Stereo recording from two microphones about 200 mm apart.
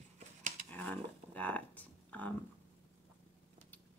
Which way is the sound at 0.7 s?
10° left (ahead or behind).